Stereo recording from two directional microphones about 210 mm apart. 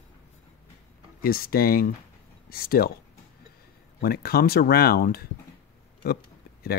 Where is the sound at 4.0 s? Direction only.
45° left (ahead or behind).